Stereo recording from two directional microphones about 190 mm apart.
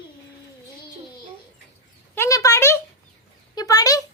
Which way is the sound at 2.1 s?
15° left (ahead or behind).